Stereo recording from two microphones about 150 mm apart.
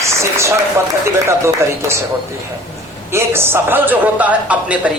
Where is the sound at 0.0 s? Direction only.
20° right (ahead or behind).